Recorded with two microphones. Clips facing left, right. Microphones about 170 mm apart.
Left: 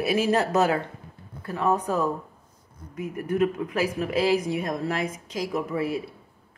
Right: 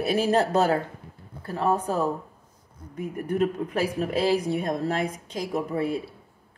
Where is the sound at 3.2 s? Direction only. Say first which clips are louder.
Left 1 dB; 35° right (ahead or behind).